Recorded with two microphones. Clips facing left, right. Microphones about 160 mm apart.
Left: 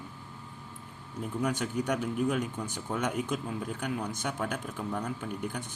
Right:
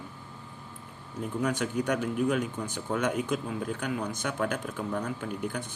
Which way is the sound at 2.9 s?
75° right (ahead or behind).